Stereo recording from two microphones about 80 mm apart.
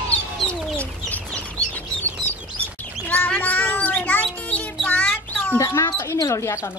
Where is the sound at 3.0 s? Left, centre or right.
Left.